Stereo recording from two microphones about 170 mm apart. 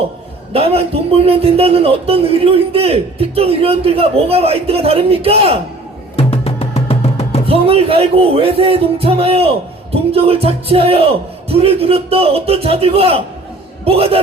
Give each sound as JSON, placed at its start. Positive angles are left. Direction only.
{"t": 0.5, "sound": "speech", "side_deg": -35}
{"t": 6.1, "sound": "music", "side_deg": 35}
{"t": 7.4, "sound": "speech", "side_deg": -35}